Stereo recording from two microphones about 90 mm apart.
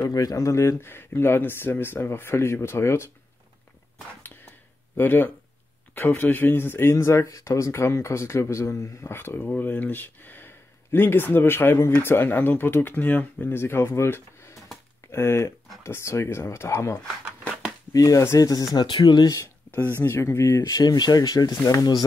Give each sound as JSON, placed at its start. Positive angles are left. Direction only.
{"t": 0.0, "sound": "speech", "side_deg": 40}
{"t": 4.9, "sound": "speech", "side_deg": 20}
{"t": 17.9, "sound": "speech", "side_deg": 40}
{"t": 18.8, "sound": "speech", "side_deg": 60}
{"t": 20.0, "sound": "speech", "side_deg": 30}
{"t": 20.6, "sound": "speech", "side_deg": 50}